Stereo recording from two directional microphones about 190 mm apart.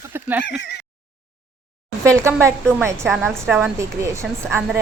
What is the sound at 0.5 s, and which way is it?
Speech, 65° left (ahead or behind).